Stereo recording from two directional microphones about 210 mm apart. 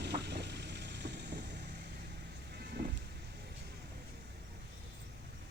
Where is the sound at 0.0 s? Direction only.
55° right (ahead or behind).